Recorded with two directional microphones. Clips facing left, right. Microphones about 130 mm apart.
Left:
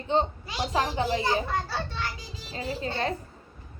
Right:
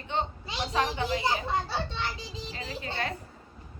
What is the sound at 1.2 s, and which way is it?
A child's voice, 20° right (ahead or behind).